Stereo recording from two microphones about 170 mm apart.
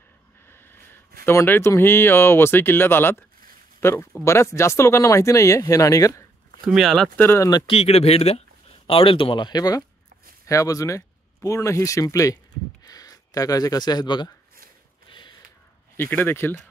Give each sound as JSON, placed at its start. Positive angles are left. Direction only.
{"t": 0.5, "sound": "a sound", "side_deg": 15}
{"t": 1.2, "sound": "speech", "side_deg": 15}
{"t": 6.6, "sound": "speech", "side_deg": 0}
{"t": 7.2, "sound": "speech", "side_deg": 15}
{"t": 7.6, "sound": "speech", "side_deg": 35}
{"t": 15.0, "sound": "a sound", "side_deg": 30}
{"t": 16.0, "sound": "speech", "side_deg": 10}